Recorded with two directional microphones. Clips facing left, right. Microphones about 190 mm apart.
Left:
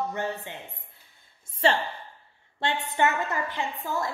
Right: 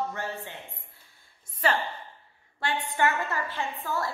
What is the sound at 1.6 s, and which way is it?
A woman's voice, 30° left (ahead or behind).